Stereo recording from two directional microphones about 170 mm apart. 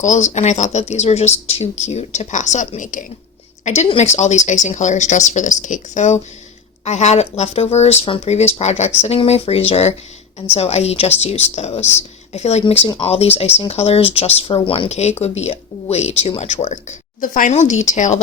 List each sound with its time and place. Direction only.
0.0 s speech: 45° left (ahead or behind)